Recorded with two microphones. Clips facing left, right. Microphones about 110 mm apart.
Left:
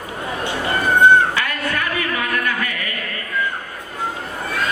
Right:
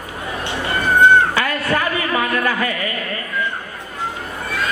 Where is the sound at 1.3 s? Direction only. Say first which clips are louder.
Right 4 dB; 30° right (ahead or behind).